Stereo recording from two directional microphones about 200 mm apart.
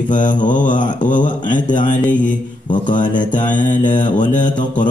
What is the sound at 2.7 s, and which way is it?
Mantra, 40° left (ahead or behind).